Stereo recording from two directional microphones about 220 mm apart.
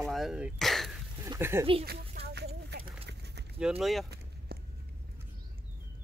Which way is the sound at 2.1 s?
50° right (ahead or behind).